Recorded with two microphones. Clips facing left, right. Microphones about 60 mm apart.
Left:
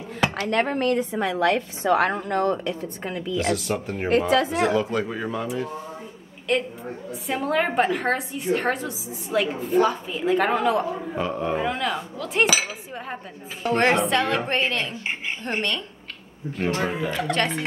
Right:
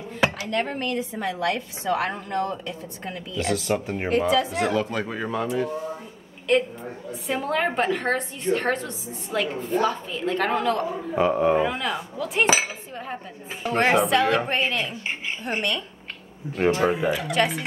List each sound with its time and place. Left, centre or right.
0.4 s a woman's voice: left
1.9 s speech: left
2.1 s a woman's voice: left
3.3 s a woman's voice: centre
11.1 s speech: centre
13.6 s a woman's voice: centre
16.8 s speech: centre